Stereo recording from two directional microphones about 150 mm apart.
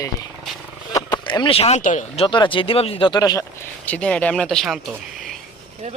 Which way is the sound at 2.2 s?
35° left (ahead or behind).